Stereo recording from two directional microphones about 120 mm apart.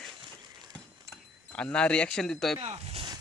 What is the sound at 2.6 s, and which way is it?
Speech, 55° right (ahead or behind).